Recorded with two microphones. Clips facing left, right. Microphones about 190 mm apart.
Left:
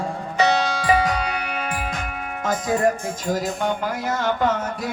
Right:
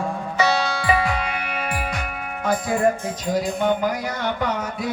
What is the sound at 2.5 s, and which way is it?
Music, 40° left (ahead or behind).